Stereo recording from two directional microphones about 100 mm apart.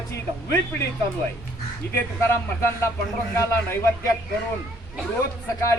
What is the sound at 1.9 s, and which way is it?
Speech, 25° left (ahead or behind).